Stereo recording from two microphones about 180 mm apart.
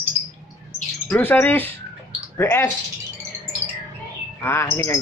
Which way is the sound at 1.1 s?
10° left (ahead or behind).